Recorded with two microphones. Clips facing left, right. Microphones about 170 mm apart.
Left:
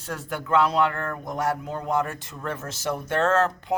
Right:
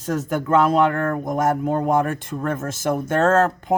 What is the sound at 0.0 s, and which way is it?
Speech, 45° right (ahead or behind).